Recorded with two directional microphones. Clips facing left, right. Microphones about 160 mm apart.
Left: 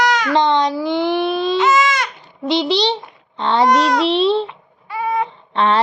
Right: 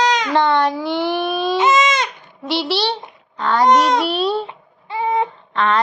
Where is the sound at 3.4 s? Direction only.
25° left (ahead or behind).